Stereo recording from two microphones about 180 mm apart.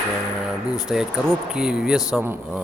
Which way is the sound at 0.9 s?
5° right (ahead or behind).